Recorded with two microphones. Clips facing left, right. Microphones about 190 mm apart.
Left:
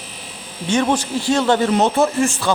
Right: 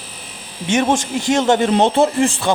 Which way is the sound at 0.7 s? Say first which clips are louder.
Right 1 dB; 20° right (ahead or behind).